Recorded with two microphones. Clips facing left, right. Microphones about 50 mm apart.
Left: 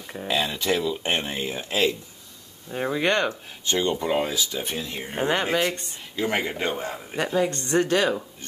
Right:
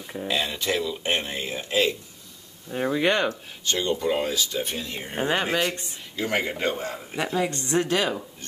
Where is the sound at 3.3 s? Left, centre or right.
Left.